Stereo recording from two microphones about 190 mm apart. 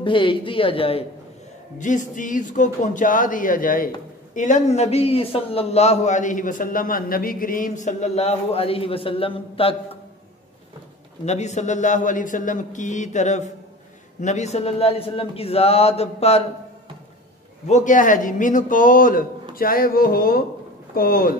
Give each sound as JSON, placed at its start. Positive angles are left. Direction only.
{"t": 0.0, "sound": "a woman's voice", "side_deg": 25}
{"t": 1.8, "sound": "a man's voice", "side_deg": 40}
{"t": 11.2, "sound": "a man's voice", "side_deg": 35}
{"t": 17.6, "sound": "speech", "side_deg": 40}